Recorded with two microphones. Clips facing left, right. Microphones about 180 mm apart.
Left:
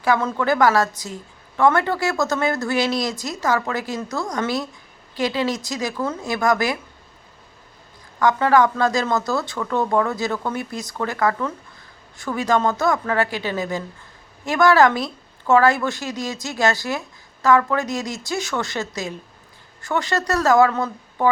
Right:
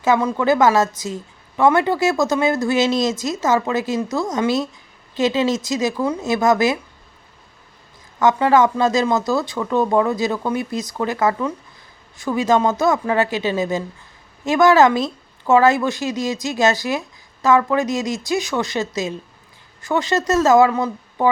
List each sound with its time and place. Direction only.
0.0 s a woman's voice: 15° right (ahead or behind)
8.2 s a woman's voice: 20° right (ahead or behind)